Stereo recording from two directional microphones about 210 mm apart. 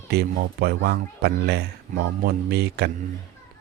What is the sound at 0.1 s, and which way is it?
Speech, 50° right (ahead or behind).